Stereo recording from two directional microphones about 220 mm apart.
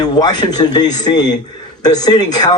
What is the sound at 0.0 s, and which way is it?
Speech, 15° left (ahead or behind).